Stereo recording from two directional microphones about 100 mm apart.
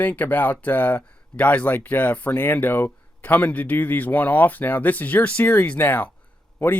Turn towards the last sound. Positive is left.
turn(degrees=20)  # may be behind; listen again after turning